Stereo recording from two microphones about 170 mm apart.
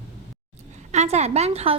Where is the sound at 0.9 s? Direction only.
40° right (ahead or behind).